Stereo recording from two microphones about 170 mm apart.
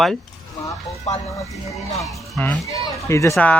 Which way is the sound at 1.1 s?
40° left (ahead or behind).